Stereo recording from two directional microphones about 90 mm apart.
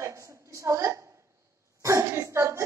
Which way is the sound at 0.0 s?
35° right (ahead or behind).